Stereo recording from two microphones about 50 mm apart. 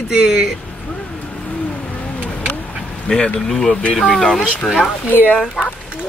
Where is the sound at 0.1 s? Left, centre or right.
Centre.